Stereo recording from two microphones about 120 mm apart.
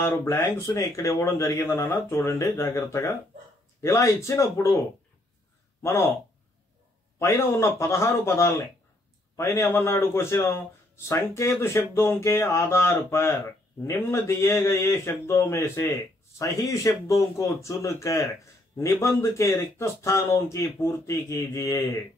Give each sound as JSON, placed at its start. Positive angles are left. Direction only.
{"t": 0.0, "sound": "speech", "side_deg": 20}
{"t": 7.2, "sound": "speech", "side_deg": 20}